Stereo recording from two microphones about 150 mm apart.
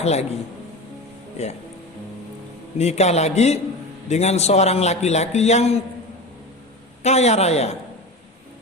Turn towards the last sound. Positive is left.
turn(degrees=45)  # may be behind; listen again after turning